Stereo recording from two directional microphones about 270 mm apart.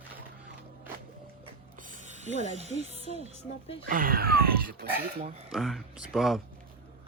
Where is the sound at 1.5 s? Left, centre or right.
Right.